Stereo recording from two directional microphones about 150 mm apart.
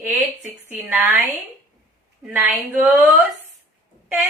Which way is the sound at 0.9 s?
10° right (ahead or behind).